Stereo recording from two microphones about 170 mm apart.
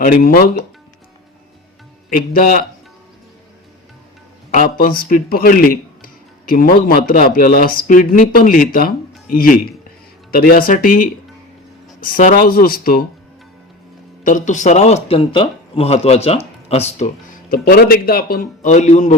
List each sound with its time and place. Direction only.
0.0 s speech: 60° left (ahead or behind)
2.0 s speech: 55° left (ahead or behind)
4.5 s speech: 55° left (ahead or behind)
14.3 s speech: 50° left (ahead or behind)
17.5 s speech: 60° left (ahead or behind); by 19.1 s 45° left (ahead or behind)